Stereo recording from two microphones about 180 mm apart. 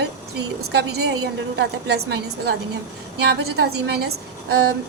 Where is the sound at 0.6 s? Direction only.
65° right (ahead or behind).